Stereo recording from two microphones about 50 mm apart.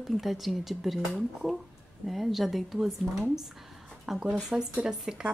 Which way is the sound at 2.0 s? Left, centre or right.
Centre.